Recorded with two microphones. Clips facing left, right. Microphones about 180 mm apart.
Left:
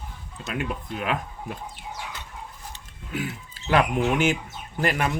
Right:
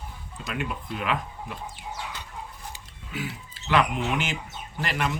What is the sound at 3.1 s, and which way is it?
Speech, 50° left (ahead or behind).